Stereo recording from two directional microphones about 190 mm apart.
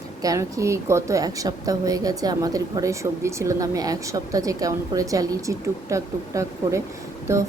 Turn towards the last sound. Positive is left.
turn(degrees=-15)  # may be behind; listen again after turning